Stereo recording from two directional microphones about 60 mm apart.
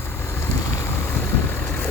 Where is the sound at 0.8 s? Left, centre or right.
Left.